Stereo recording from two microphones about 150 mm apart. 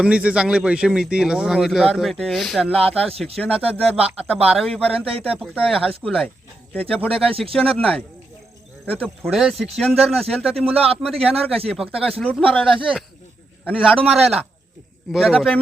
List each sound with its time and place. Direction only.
0.0 s speech: 10° right (ahead or behind)
11.1 s a man's voice: 40° right (ahead or behind)
11.7 s speech: 5° right (ahead or behind)
13.8 s speech: centre (ahead or behind)